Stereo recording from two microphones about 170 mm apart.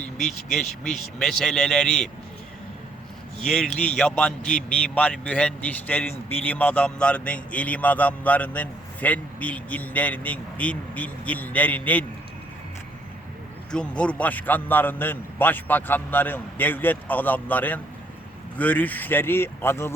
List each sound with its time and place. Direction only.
0.5 s a man's voice: centre (ahead or behind)
3.4 s a man's voice: 5° left (ahead or behind)
13.7 s a man's voice: 5° left (ahead or behind)